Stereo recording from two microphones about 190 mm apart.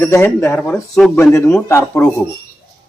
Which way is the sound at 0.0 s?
15° left (ahead or behind).